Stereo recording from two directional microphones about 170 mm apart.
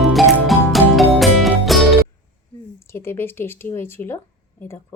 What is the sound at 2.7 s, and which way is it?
Speech, 15° left (ahead or behind).